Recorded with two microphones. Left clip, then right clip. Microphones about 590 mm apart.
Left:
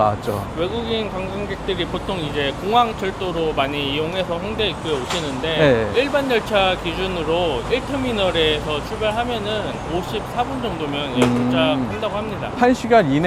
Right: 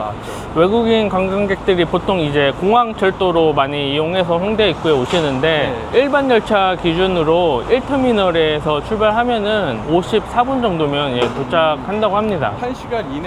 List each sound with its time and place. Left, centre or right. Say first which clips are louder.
0.6 s speech: right 11 dB; right
5.9 s speech: right 5 dB; right
11.5 s speech: right 4 dB; right
12.6 s speech: left 7 dB; left